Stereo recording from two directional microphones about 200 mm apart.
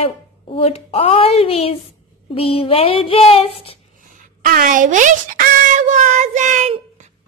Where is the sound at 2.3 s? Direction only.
30° left (ahead or behind).